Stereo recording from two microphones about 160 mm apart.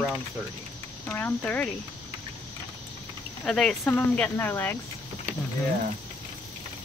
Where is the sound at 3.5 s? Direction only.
5° left (ahead or behind).